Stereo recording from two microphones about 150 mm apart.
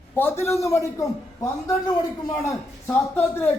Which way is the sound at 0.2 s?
15° left (ahead or behind).